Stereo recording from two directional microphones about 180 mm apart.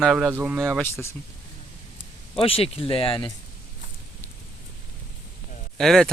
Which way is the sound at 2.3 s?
30° left (ahead or behind).